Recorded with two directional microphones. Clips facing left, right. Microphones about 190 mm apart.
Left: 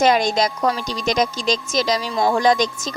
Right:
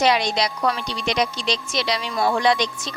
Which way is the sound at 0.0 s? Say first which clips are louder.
Left 3 dB; 45° left (ahead or behind).